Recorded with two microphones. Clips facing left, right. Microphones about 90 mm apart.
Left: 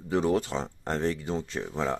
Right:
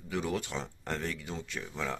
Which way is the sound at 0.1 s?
35° left (ahead or behind).